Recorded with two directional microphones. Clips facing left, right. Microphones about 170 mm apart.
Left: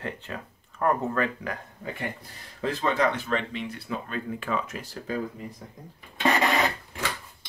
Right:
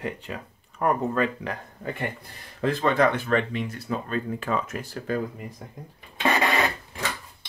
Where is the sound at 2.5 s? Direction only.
60° right (ahead or behind).